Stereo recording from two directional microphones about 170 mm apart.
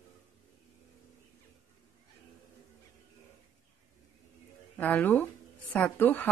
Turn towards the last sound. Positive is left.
turn(degrees=10)  # may be behind; listen again after turning